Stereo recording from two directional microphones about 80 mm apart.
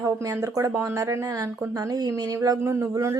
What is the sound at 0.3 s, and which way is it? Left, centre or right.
A woman's voice, right.